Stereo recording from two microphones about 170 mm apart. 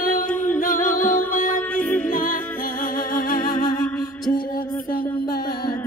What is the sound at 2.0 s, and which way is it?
Music, 50° left (ahead or behind).